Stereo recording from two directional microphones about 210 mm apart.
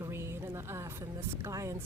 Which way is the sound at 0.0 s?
15° right (ahead or behind).